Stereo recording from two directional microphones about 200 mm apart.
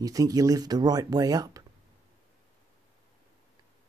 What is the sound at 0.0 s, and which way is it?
Speech, 20° right (ahead or behind).